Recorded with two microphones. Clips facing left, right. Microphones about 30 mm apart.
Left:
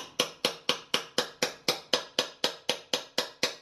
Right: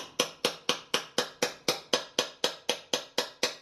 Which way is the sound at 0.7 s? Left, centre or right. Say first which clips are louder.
Left 1 dB; left.